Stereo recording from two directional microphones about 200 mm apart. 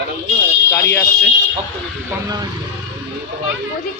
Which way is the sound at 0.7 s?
10° left (ahead or behind).